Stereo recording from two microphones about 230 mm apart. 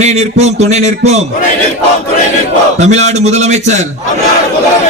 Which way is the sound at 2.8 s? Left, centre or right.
Right.